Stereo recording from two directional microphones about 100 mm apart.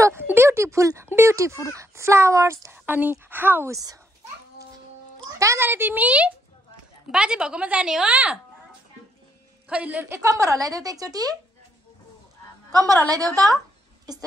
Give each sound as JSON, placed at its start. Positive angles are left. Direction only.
{"t": 0.0, "sound": "speech", "side_deg": -25}
{"t": 2.8, "sound": "speech", "side_deg": -15}
{"t": 3.7, "sound": "a woman's voice", "side_deg": -35}
{"t": 5.4, "sound": "speech", "side_deg": -25}
{"t": 9.7, "sound": "speech", "side_deg": -10}
{"t": 10.0, "sound": "a woman's voice", "side_deg": -30}
{"t": 12.7, "sound": "a woman's voice", "side_deg": -35}